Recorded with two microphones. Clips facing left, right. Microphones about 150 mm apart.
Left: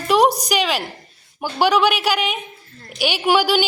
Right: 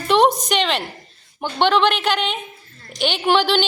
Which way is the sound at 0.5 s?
5° left (ahead or behind).